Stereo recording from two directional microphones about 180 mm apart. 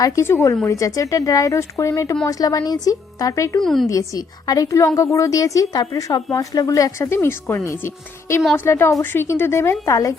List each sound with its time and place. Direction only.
0.0 s speech: 15° left (ahead or behind)
3.6 s a woman's voice: centre (ahead or behind)
3.8 s speech: 20° left (ahead or behind)